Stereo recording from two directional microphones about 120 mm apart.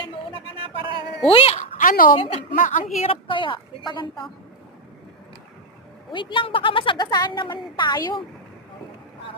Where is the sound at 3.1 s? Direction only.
45° left (ahead or behind).